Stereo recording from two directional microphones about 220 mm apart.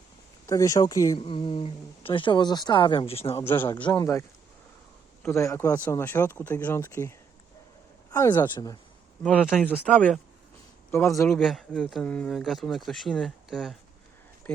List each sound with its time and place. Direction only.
0.4 s speech: 15° left (ahead or behind)
3.4 s speech: 10° left (ahead or behind)
8.1 s speech: 15° left (ahead or behind)
9.2 s speech: 5° left (ahead or behind)
11.3 s speech: centre (ahead or behind)